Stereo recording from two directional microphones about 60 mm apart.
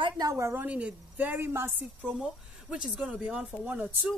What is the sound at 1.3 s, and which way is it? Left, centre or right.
Speech, right.